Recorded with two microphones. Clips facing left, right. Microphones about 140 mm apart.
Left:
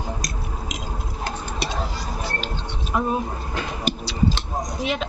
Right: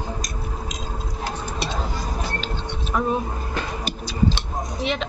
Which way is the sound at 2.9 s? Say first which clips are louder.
Even; 15° left (ahead or behind).